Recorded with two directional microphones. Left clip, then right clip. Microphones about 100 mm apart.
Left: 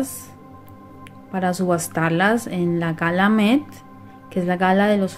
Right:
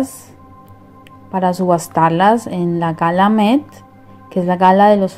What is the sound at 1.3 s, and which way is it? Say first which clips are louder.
A woman's voice: right 7 dB; 30° right (ahead or behind).